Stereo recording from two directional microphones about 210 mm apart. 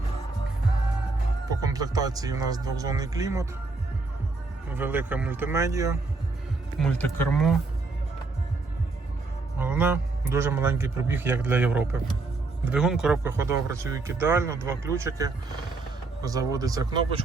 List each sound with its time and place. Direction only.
1.5 s a man's voice: 15° right (ahead or behind)
4.7 s a man's voice: 10° right (ahead or behind)
6.7 s speech: 5° left (ahead or behind)
9.6 s a man's voice: 5° right (ahead or behind)